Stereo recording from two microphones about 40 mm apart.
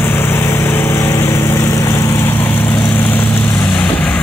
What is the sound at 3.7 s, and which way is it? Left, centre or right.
Vehicle, left.